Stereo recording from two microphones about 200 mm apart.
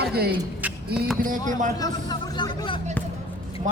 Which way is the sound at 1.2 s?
40° right (ahead or behind).